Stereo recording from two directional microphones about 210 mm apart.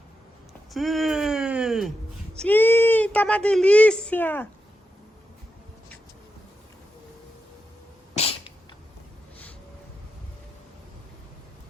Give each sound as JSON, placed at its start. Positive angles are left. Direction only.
{"t": 0.7, "sound": "a sound", "side_deg": 0}
{"t": 2.4, "sound": "speech", "side_deg": 10}
{"t": 8.1, "sound": "sneeze", "side_deg": 30}